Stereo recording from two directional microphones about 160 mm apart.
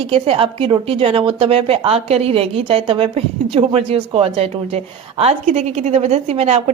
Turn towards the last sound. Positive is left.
turn(degrees=-40)  # may be behind; listen again after turning